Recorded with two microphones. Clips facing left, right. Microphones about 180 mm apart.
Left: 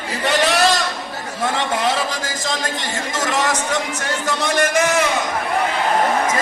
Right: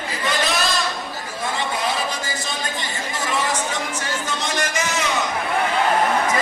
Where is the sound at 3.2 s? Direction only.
80° left.